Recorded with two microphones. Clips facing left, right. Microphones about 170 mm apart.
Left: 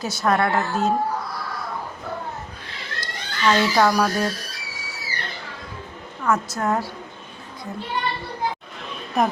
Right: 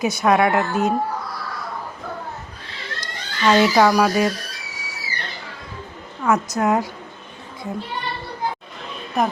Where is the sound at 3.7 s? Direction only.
10° right (ahead or behind).